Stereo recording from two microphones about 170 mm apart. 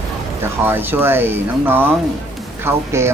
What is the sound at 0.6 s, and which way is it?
Speech, 10° right (ahead or behind).